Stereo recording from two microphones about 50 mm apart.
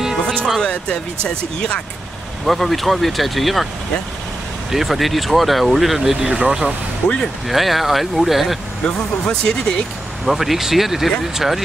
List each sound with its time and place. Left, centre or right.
0.6 s speech: centre
2.4 s speech: centre
4.6 s speech: centre
6.2 s speech: centre
7.4 s speech: centre
8.8 s speech: centre
10.2 s speech: centre